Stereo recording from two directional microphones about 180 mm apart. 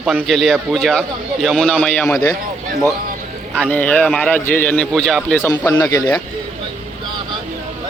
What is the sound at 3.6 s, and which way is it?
A man's voice, 10° left (ahead or behind).